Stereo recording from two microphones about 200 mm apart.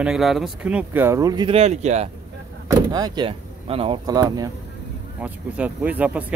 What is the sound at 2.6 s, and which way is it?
Speech, 20° right (ahead or behind).